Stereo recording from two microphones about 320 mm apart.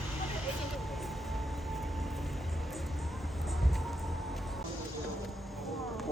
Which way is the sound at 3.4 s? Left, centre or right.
Centre.